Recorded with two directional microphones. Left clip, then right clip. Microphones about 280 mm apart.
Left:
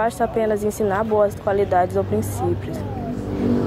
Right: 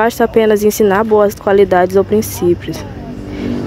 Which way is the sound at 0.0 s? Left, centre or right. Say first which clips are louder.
Right 9 dB; right.